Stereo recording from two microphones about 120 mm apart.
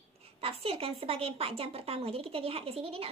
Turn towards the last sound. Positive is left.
turn(degrees=-55)  # may be behind; listen again after turning